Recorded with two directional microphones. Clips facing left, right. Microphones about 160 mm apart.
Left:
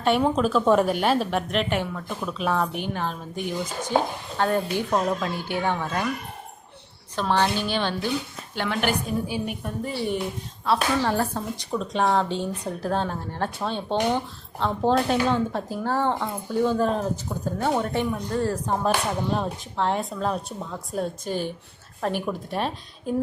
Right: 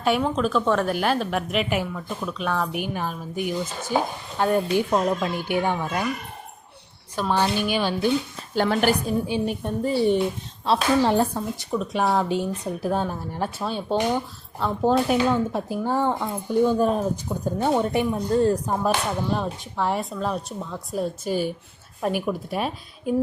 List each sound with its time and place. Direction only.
0.2 s a woman's voice: 10° left (ahead or behind)
0.6 s a woman's voice: 15° left (ahead or behind)
0.9 s a woman's voice: centre (ahead or behind)
2.7 s speech: 10° right (ahead or behind)
7.2 s speech: 10° right (ahead or behind)
8.5 s a woman's voice: 40° right (ahead or behind)
9.2 s a woman's voice: 25° right (ahead or behind)
11.3 s speech: 5° right (ahead or behind)
18.1 s a woman's voice: 25° right (ahead or behind)
19.3 s a woman's voice: centre (ahead or behind)